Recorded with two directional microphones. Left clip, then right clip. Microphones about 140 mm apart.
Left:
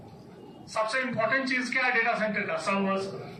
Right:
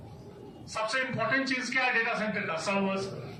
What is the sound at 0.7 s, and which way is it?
A man's voice, 35° right (ahead or behind).